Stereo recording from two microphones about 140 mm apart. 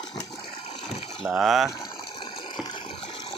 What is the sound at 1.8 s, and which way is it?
Ratchet, 35° left (ahead or behind).